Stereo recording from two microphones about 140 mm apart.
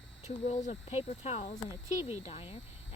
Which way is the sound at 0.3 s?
50° left (ahead or behind).